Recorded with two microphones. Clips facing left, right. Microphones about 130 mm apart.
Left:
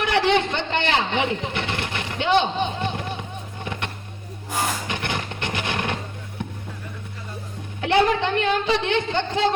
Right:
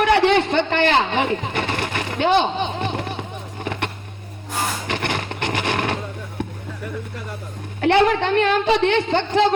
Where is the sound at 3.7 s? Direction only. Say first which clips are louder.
Right 5 dB; 55° right (ahead or behind).